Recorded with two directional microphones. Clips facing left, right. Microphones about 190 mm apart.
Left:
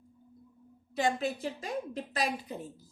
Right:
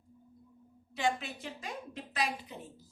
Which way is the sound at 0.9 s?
40° left (ahead or behind).